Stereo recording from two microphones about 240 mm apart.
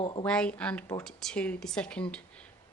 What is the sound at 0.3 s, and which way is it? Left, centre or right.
Speech, centre.